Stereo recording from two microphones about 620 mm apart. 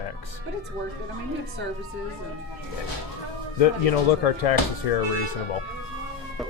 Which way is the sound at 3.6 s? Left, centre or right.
Left.